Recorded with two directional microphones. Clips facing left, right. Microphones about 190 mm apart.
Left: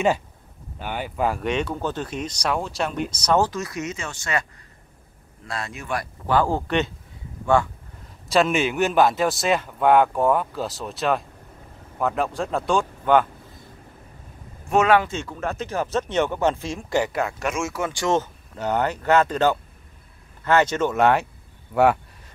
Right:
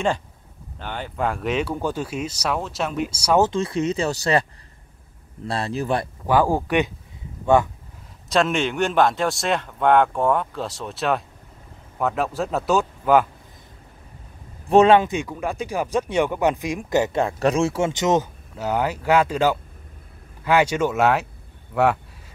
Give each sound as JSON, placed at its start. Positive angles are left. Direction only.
{"t": 0.7, "sound": "a man's voice", "side_deg": 10}
{"t": 3.3, "sound": "speech", "side_deg": -25}
{"t": 5.5, "sound": "speech", "side_deg": -30}
{"t": 6.2, "sound": "speech", "side_deg": -15}
{"t": 8.3, "sound": "a man's voice", "side_deg": 0}
{"t": 14.7, "sound": "speech", "side_deg": -30}
{"t": 18.6, "sound": "speech", "side_deg": -5}